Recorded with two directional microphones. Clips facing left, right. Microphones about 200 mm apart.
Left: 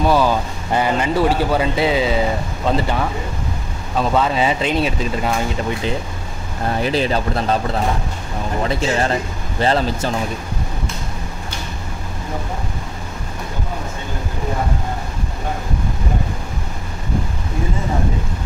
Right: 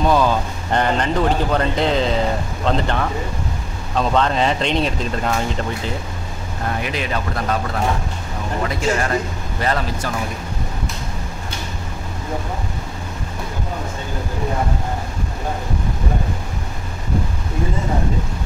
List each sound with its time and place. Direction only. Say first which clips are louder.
0.0 s speech: left 1 dB; 5° left (ahead or behind)
6.8 s speech: left 9 dB; 30° left (ahead or behind)
8.6 s speech: left 1 dB; 30° left (ahead or behind)